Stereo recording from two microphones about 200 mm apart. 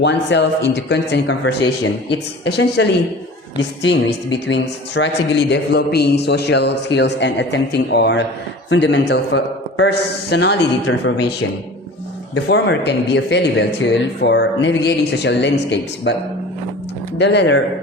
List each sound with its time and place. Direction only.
0.0 s a woman's voice: 60° left (ahead or behind)
12.5 s a woman's voice: 55° left (ahead or behind)
17.2 s a woman's voice: 60° left (ahead or behind)